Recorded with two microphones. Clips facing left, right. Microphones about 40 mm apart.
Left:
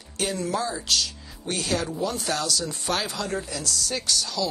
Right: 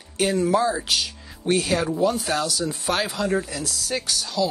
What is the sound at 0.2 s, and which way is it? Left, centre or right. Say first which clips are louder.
Speech: right 7 dB; centre.